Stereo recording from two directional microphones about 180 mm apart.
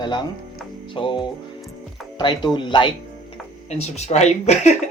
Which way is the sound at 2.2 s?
25° left (ahead or behind).